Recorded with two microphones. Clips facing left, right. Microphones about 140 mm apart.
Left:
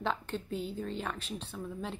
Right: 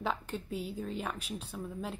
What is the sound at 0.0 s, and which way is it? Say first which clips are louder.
A woman's voice: left 1 dB; 5° right (ahead or behind).